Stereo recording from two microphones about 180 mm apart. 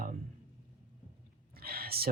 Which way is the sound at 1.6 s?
55° right (ahead or behind).